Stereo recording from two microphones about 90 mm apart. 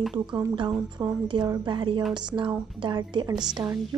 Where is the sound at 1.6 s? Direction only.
60° right (ahead or behind).